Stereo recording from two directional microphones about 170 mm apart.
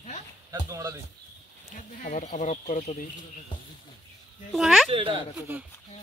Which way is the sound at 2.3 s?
45° left (ahead or behind).